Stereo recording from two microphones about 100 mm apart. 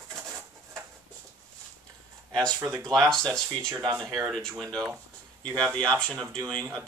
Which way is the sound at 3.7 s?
30° right (ahead or behind).